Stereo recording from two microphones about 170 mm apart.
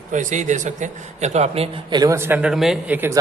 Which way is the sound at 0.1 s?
45° right (ahead or behind).